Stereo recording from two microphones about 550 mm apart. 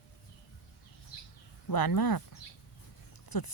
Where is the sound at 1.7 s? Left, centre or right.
Left.